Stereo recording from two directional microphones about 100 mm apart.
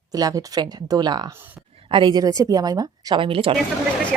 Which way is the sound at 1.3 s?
20° right (ahead or behind).